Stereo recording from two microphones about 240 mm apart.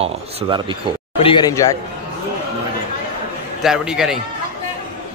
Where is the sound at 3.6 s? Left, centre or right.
Centre.